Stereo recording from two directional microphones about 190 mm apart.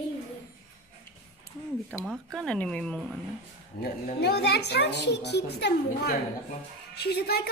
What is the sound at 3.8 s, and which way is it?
A child's voice, 60° left (ahead or behind).